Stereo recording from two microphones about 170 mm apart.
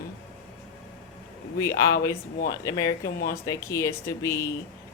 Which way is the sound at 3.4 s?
15° left (ahead or behind).